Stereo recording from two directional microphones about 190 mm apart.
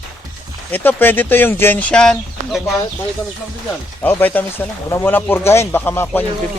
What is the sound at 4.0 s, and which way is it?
Speech, 10° left (ahead or behind).